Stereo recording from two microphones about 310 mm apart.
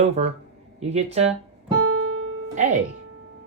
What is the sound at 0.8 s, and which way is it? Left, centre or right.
Speech, right.